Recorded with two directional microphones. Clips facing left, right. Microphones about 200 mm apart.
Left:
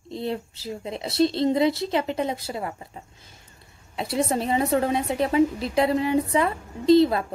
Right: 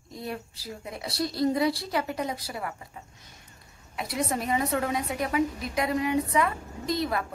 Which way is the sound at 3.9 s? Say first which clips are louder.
Left 5 dB; 30° left (ahead or behind).